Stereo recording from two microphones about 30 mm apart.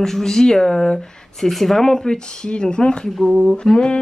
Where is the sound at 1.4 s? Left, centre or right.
Centre; by 3.1 s left.